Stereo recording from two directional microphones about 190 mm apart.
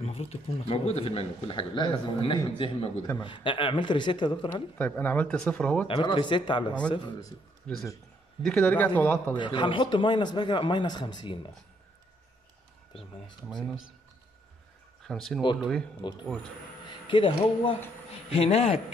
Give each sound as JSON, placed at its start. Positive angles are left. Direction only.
{"t": 0.0, "sound": "speech", "side_deg": 30}
{"t": 4.7, "sound": "speech", "side_deg": 10}
{"t": 5.9, "sound": "speech", "side_deg": 25}
{"t": 7.7, "sound": "speech", "side_deg": 5}
{"t": 9.4, "sound": "speech", "side_deg": 25}
{"t": 13.5, "sound": "speech", "side_deg": 0}
{"t": 15.0, "sound": "speech", "side_deg": 0}
{"t": 16.0, "sound": "speech", "side_deg": 25}